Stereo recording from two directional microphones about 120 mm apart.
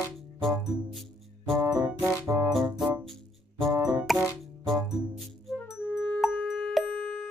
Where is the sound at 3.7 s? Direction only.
30° right (ahead or behind).